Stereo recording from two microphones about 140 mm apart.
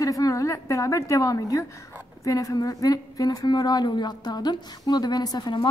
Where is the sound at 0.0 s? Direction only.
25° left (ahead or behind).